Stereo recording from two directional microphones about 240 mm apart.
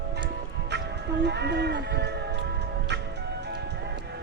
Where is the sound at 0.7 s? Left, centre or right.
Right.